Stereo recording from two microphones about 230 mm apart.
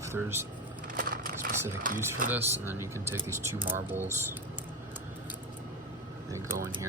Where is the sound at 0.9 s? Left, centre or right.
Right.